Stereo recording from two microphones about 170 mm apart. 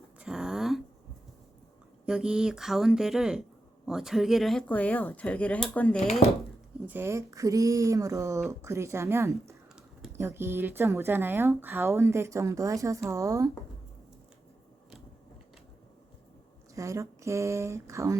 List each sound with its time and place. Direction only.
0.2 s a sound: 5° right (ahead or behind)
2.0 s speech: 5° right (ahead or behind)
6.8 s speech: 15° right (ahead or behind)
16.7 s speech: 20° right (ahead or behind)